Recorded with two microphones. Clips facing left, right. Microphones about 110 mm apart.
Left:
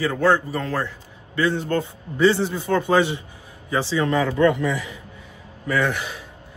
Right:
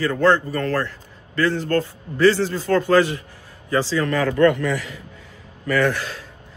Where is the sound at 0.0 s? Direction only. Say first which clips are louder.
Right 2 dB; 10° left (ahead or behind).